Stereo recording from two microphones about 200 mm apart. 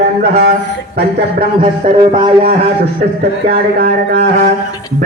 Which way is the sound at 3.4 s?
55° right (ahead or behind).